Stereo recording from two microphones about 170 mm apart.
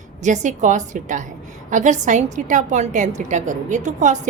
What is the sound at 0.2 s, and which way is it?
A woman's voice, 45° right (ahead or behind).